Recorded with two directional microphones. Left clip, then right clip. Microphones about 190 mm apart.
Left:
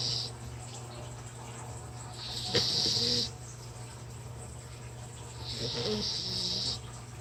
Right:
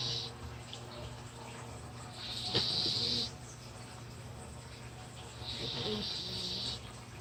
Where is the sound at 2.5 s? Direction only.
30° left (ahead or behind).